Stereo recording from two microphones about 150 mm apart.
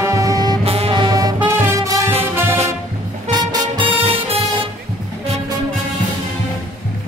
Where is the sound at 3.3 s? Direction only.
30° right (ahead or behind).